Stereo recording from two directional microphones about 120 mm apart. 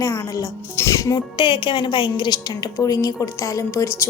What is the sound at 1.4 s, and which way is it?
A woman's voice, 40° left (ahead or behind).